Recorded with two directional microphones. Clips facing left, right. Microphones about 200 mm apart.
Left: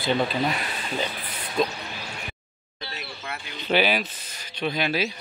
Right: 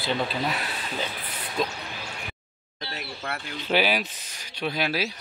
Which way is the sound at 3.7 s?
5° right (ahead or behind).